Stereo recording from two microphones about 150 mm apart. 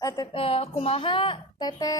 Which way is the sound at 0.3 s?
40° left (ahead or behind).